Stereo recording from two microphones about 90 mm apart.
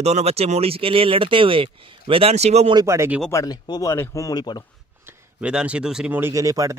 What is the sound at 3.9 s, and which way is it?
Speech, 35° left (ahead or behind).